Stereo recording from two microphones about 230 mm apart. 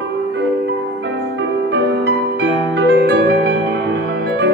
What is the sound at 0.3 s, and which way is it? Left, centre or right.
Music, right.